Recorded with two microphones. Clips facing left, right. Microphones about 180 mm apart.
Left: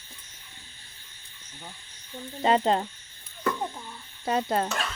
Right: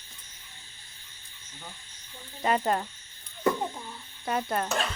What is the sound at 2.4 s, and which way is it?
Speech, 25° left (ahead or behind).